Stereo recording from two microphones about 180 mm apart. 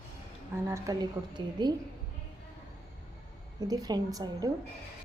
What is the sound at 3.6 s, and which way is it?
Speech, 20° right (ahead or behind).